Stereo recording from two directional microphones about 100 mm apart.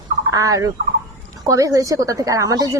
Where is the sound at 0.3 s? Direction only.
35° right (ahead or behind).